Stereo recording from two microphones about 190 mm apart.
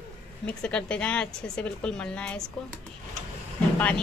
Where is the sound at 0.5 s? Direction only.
5° left (ahead or behind).